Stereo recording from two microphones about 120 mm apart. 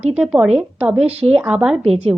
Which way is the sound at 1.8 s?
55° right (ahead or behind).